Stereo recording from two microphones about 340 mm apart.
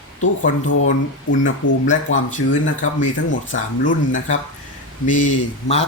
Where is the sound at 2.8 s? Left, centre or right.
Left.